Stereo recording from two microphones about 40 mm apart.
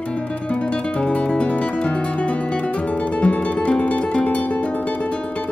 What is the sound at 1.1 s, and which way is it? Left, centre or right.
Guitar, left.